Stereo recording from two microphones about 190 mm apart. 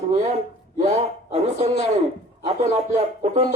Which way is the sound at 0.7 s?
35° right (ahead or behind).